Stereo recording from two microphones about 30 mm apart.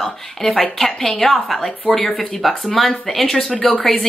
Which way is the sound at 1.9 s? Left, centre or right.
Left.